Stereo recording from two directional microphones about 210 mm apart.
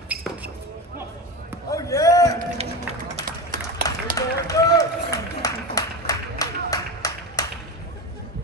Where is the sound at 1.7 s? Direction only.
15° left (ahead or behind).